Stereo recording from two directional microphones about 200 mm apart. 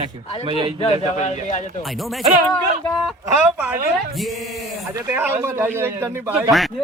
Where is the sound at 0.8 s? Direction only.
35° left (ahead or behind).